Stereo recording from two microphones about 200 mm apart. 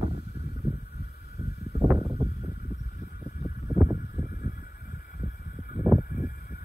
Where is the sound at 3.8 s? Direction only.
10° right (ahead or behind).